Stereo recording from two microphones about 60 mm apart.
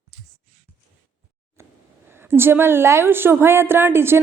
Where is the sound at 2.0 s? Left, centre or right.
Right.